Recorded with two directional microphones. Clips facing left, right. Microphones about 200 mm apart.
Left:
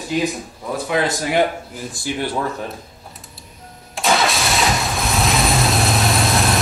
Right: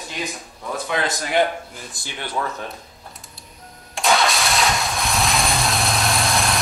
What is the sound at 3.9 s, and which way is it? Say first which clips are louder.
Engine starting: left 1 dB; centre (ahead or behind).